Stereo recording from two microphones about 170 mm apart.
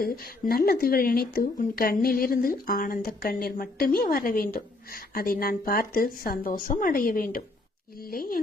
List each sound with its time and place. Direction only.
0.0 s speech: 60° left (ahead or behind)